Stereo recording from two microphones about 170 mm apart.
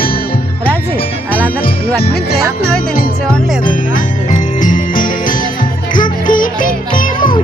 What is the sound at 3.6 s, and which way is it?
Music, 55° left (ahead or behind).